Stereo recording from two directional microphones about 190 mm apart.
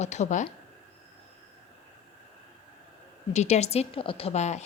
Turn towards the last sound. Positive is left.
turn(degrees=35)  # may be behind; listen again after turning